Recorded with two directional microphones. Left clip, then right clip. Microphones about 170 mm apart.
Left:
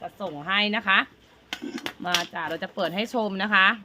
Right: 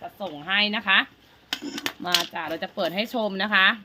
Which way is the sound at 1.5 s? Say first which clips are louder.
Right 3 dB; 55° right (ahead or behind).